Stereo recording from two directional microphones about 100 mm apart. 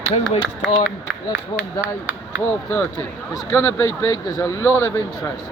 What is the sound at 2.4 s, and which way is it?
Speech, 20° left (ahead or behind).